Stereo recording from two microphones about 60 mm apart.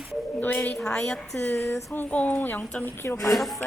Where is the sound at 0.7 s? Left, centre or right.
Centre.